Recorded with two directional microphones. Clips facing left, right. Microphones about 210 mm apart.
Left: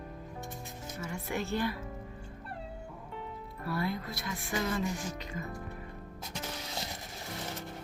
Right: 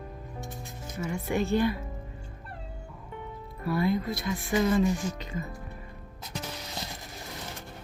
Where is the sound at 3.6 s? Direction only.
15° right (ahead or behind).